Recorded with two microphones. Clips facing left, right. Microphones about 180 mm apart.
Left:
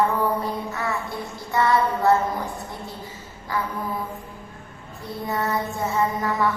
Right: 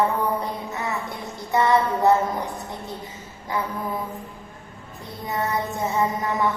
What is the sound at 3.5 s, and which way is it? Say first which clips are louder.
Mantra: even; 20° right (ahead or behind).